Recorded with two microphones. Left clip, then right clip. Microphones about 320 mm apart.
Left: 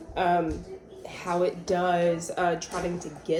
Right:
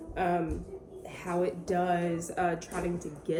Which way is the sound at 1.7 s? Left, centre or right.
Centre.